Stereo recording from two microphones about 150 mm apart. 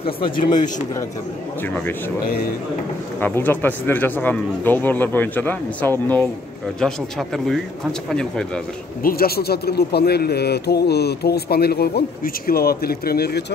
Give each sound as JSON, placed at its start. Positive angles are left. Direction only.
{"t": 0.4, "sound": "speech", "side_deg": 55}
{"t": 3.2, "sound": "speech", "side_deg": 10}
{"t": 9.0, "sound": "speech", "side_deg": 90}